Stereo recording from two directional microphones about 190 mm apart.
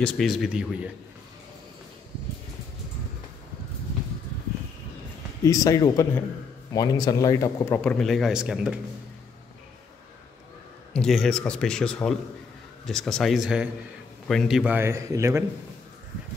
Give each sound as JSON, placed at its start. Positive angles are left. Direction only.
{"t": 0.0, "sound": "speech", "side_deg": 0}
{"t": 5.4, "sound": "speech", "side_deg": 20}
{"t": 7.8, "sound": "speech", "side_deg": 5}
{"t": 10.9, "sound": "a man's voice", "side_deg": 5}